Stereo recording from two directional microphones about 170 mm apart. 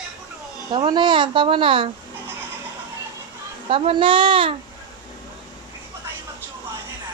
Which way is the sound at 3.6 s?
30° right (ahead or behind).